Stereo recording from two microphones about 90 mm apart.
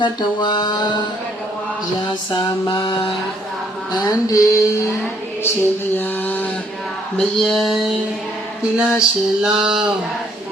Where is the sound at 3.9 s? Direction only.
45° left (ahead or behind).